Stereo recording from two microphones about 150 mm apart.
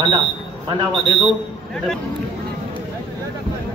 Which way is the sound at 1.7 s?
5° left (ahead or behind).